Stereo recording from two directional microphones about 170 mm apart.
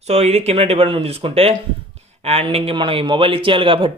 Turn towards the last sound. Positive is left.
turn(degrees=-30)  # may be behind; listen again after turning